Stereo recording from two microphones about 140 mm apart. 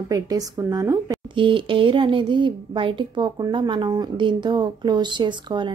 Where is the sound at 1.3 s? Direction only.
35° right (ahead or behind).